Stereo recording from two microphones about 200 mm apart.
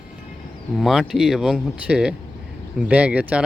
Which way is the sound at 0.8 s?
Centre (ahead or behind).